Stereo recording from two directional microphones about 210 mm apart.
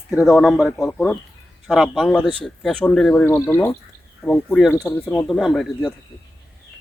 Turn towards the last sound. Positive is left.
turn(degrees=0)  # may be behind; listen again after turning